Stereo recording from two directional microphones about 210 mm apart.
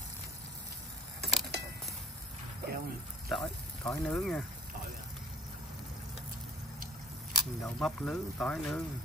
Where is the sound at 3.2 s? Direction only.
Centre (ahead or behind).